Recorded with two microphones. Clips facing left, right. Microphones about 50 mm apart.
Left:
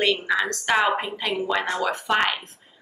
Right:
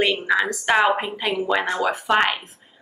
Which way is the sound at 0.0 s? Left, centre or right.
Centre.